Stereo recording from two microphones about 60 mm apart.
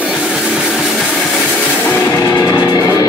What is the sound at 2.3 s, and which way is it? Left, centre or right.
Music, left.